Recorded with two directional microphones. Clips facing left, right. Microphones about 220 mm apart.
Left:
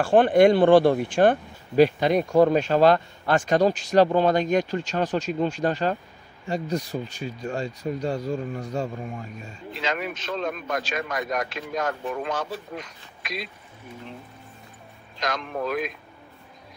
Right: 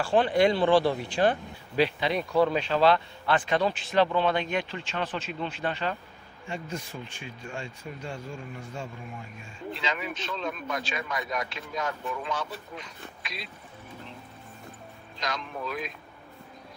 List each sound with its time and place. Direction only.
0.0 s speech: 50° left (ahead or behind)
15.1 s speech: 50° left (ahead or behind)